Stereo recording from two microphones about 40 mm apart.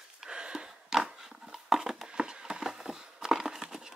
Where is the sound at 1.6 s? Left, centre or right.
Centre.